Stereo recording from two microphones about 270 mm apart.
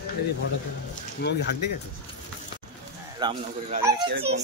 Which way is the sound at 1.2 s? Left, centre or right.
Left.